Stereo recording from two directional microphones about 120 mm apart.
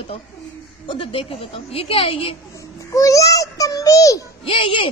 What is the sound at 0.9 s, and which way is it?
A woman's voice, 50° left (ahead or behind).